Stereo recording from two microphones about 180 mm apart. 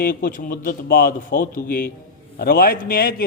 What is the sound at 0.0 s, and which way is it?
A man's voice, 50° left (ahead or behind).